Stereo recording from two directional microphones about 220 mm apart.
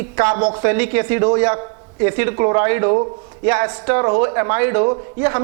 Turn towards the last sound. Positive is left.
turn(degrees=-20)  # may be behind; listen again after turning